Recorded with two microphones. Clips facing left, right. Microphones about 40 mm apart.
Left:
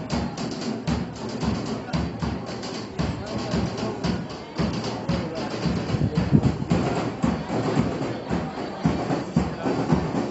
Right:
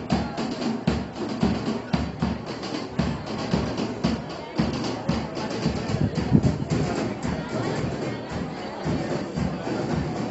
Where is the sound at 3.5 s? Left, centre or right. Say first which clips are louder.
Right 1 dB; centre.